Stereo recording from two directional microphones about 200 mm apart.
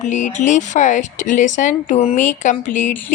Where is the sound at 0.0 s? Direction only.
35° left (ahead or behind).